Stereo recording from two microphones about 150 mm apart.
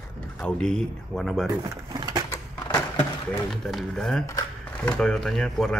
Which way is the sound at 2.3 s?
25° left (ahead or behind).